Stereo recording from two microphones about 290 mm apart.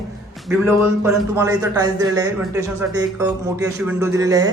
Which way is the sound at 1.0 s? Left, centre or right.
Centre.